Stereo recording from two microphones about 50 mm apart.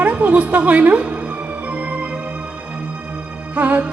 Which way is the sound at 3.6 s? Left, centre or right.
Right.